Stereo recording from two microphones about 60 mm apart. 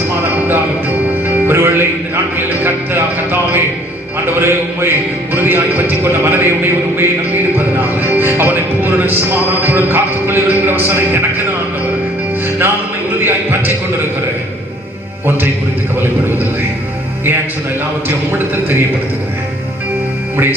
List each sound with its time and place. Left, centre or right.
1.5 s music: right
2.6 s a man's voice: right
13.1 s speech: right
18.3 s a man's voice: right
20.3 s speech: right